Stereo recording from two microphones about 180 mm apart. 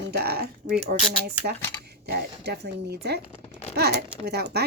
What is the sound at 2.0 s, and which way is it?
Speech, 65° right (ahead or behind).